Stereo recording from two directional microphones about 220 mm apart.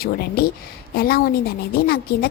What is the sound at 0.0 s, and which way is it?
A woman's voice, 45° left (ahead or behind).